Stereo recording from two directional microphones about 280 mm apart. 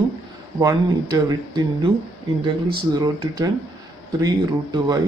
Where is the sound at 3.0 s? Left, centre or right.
Centre.